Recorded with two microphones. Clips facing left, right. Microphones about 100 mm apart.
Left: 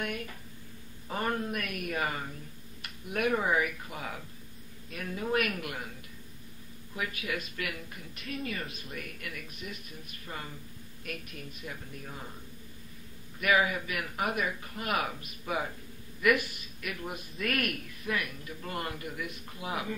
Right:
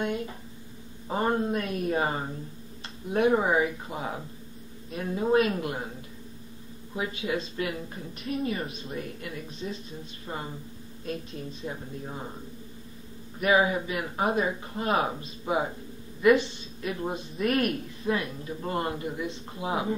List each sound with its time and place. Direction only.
0.0 s a sound: 25° right (ahead or behind)
1.0 s speech: 25° right (ahead or behind)
13.4 s speech: 25° right (ahead or behind)